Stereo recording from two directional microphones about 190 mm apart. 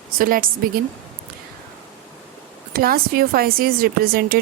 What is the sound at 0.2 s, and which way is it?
Speech, 50° right (ahead or behind).